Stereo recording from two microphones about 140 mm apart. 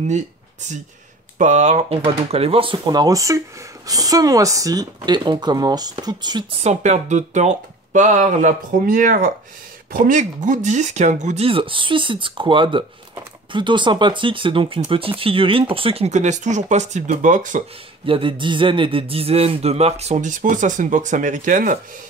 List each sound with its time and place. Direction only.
0.1 s a sound: 60° right (ahead or behind)
1.4 s speech: 55° right (ahead or behind); by 6.4 s 30° right (ahead or behind)
6.6 s speech: 55° right (ahead or behind); by 9.3 s 75° right (ahead or behind)
9.9 s speech: 65° right (ahead or behind)
11.4 s speech: 40° right (ahead or behind); by 17.6 s 65° right (ahead or behind)
18.0 s speech: 40° right (ahead or behind); by 21.7 s 70° right (ahead or behind)